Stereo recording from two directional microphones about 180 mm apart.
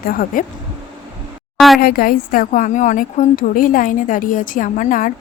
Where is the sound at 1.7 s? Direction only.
55° left (ahead or behind).